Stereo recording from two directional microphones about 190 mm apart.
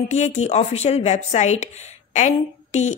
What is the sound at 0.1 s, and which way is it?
Speech, 35° left (ahead or behind).